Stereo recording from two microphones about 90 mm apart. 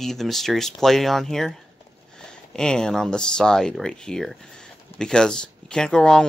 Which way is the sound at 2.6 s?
10° left (ahead or behind).